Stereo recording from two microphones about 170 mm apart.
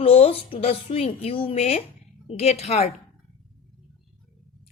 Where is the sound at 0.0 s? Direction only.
35° left (ahead or behind).